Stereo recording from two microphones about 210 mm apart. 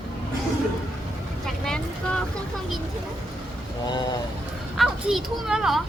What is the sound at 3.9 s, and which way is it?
Speech, 20° left (ahead or behind).